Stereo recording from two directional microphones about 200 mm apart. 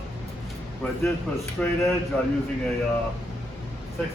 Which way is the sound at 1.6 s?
5° left (ahead or behind).